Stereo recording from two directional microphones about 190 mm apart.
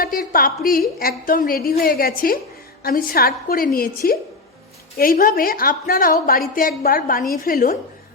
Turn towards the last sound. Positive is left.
turn(degrees=50)  # may be behind; listen again after turning